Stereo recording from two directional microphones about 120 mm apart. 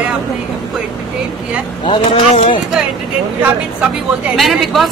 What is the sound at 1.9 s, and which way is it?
Speech, 55° left (ahead or behind).